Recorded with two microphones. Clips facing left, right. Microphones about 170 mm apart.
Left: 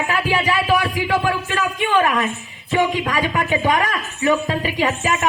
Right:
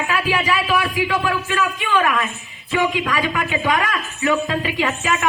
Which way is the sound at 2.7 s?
40° left (ahead or behind).